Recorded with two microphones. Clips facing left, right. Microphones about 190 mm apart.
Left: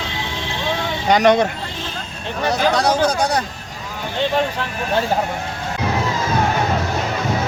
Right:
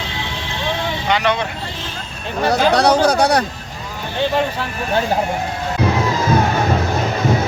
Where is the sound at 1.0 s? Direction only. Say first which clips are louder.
Left 6 dB; 45° left (ahead or behind).